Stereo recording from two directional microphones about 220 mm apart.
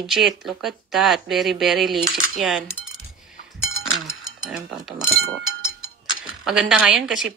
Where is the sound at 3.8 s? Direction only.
Centre (ahead or behind).